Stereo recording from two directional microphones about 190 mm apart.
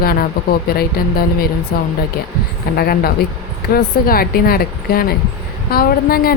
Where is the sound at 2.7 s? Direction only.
50° left (ahead or behind).